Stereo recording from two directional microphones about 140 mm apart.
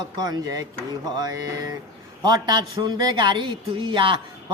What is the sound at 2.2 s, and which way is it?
A woman's voice, 30° right (ahead or behind).